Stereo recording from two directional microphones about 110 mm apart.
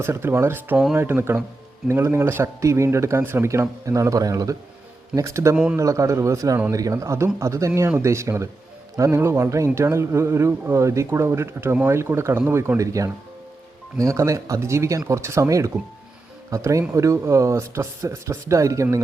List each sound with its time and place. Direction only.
0.0 s a man's voice: 25° right (ahead or behind)